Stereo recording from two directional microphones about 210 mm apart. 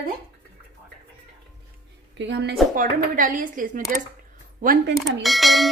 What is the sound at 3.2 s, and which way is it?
Speech, 40° right (ahead or behind).